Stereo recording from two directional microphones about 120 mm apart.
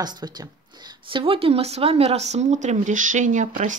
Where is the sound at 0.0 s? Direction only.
35° right (ahead or behind).